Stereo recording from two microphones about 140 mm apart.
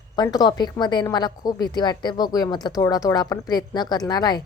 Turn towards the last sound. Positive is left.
turn(degrees=30)  # may be behind; listen again after turning